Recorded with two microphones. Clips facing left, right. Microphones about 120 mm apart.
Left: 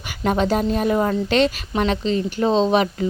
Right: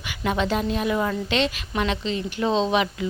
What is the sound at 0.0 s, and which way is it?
A woman's voice, 40° left (ahead or behind).